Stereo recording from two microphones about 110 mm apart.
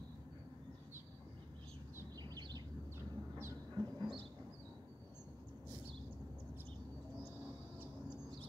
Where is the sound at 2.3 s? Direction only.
35° right (ahead or behind).